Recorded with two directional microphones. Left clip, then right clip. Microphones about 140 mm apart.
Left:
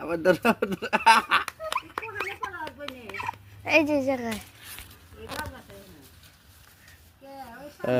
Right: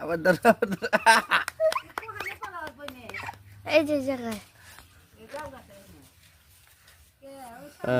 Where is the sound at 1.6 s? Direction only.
30° right (ahead or behind).